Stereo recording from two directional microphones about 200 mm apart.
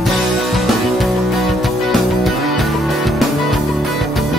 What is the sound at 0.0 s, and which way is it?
Music, centre (ahead or behind).